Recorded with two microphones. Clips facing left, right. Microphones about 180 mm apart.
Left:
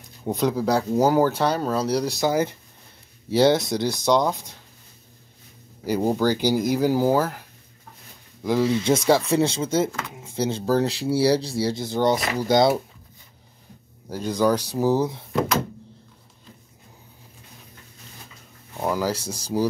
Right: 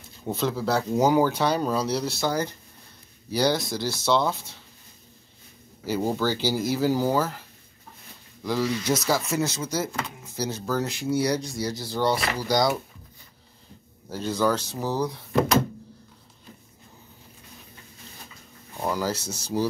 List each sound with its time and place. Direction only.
0.3 s speech: 15° left (ahead or behind)
5.9 s speech: 15° left (ahead or behind)
8.5 s speech: 25° left (ahead or behind)
14.0 s speech: 15° left (ahead or behind)
18.8 s speech: 10° left (ahead or behind)